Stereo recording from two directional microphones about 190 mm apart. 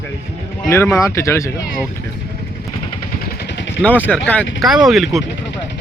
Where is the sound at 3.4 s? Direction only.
65° left (ahead or behind).